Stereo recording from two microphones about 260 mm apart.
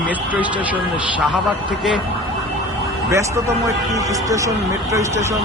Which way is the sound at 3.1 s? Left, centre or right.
Centre.